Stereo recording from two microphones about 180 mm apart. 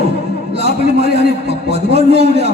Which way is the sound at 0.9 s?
35° right (ahead or behind).